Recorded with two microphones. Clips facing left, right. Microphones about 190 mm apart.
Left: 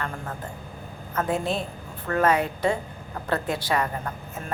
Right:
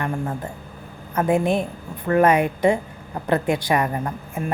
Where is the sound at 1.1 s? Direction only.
15° right (ahead or behind).